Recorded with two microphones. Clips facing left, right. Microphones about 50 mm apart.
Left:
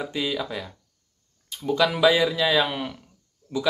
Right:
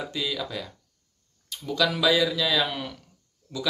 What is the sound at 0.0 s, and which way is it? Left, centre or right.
Speech, left.